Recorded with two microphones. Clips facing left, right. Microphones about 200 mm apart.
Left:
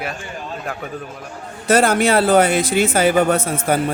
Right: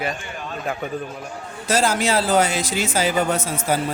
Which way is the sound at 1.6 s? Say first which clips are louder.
Left 5 dB; 60° left (ahead or behind).